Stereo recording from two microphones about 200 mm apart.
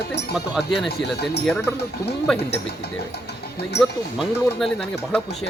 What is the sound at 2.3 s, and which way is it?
Speech, 5° left (ahead or behind).